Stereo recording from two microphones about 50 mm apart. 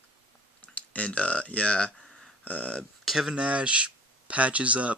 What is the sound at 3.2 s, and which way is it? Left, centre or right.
Speech, centre.